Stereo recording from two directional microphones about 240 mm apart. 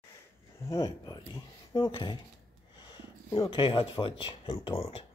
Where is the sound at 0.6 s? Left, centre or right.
Centre.